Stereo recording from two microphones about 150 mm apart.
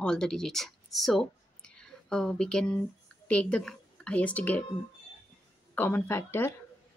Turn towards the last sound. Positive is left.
turn(degrees=15)  # may be behind; listen again after turning